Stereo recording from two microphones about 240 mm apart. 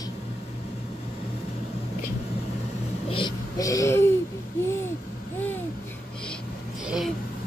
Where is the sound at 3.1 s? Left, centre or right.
Centre.